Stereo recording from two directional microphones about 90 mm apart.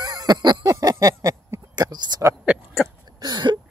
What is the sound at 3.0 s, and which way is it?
Throat clearing, 50° right (ahead or behind).